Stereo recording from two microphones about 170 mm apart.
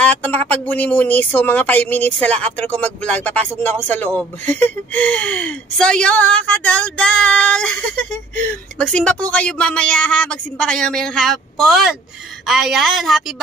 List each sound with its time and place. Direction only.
0.0 s speech: 10° left (ahead or behind)